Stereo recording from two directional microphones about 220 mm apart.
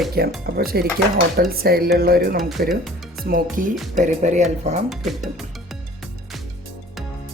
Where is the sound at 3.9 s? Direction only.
35° right (ahead or behind).